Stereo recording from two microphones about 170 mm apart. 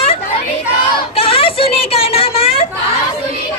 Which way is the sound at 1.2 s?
35° left (ahead or behind).